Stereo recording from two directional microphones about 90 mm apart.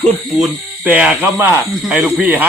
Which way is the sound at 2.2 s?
20° right (ahead or behind).